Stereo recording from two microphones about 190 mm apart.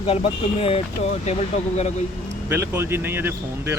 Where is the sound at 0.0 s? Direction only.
30° left (ahead or behind).